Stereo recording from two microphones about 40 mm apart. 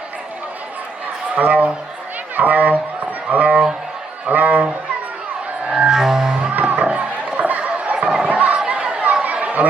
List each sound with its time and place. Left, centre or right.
1.4 s a man's voice: right
2.3 s a sound: right
4.3 s speech: right
5.7 s music: centre
6.5 s music: right
6.8 s chatter: right
8.3 s chatter: right
8.5 s chatter: right
9.2 s chatter: right